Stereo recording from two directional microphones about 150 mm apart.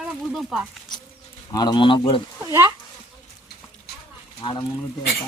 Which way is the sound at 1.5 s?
25° left (ahead or behind).